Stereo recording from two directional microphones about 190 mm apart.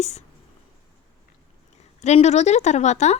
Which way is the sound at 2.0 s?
35° left (ahead or behind).